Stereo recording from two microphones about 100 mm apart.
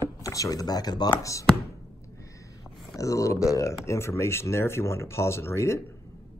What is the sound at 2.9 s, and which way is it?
Speech, 35° left (ahead or behind).